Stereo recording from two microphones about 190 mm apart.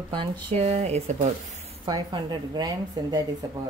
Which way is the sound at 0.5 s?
35° right (ahead or behind).